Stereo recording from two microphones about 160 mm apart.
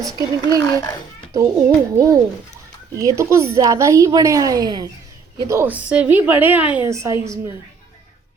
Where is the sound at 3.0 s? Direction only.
20° right (ahead or behind).